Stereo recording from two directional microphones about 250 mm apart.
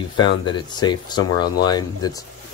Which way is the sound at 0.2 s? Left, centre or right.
Centre.